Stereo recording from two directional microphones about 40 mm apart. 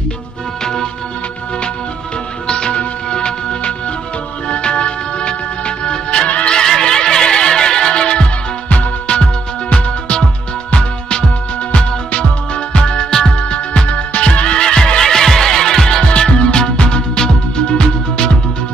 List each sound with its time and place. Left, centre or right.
2.4 s music: left
6.2 s music: left
6.5 s music: centre
16.1 s music: left